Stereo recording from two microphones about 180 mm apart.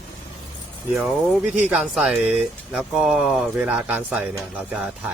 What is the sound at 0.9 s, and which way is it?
Speech, 5° right (ahead or behind).